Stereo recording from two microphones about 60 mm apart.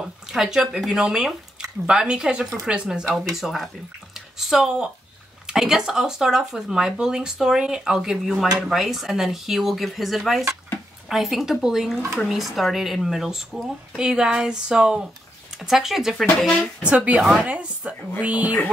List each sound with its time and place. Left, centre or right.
0.0 s speech: centre
3.3 s speech: centre
16.8 s speech: right